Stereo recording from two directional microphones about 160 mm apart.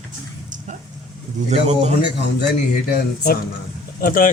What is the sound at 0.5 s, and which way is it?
Vehicle, 50° right (ahead or behind).